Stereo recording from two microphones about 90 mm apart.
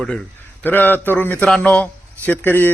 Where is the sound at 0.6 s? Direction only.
20° left (ahead or behind).